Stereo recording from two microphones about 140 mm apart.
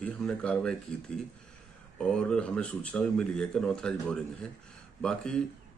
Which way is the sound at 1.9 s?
5° left (ahead or behind).